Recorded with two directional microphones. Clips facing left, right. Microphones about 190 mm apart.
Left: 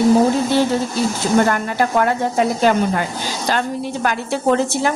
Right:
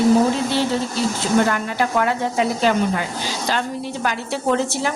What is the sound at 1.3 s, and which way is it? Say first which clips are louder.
A woman's voice: left 2 dB; 45° left (ahead or behind).